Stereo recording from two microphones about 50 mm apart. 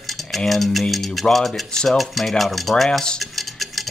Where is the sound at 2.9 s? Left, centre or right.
Centre.